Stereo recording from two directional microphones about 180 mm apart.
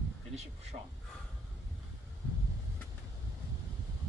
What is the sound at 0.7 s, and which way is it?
Speech, 35° right (ahead or behind).